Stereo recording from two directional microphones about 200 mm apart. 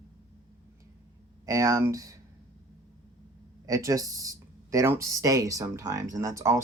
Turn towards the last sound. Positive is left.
turn(degrees=-15)  # may be behind; listen again after turning